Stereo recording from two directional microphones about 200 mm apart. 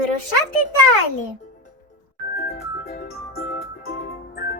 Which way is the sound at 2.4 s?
50° left (ahead or behind).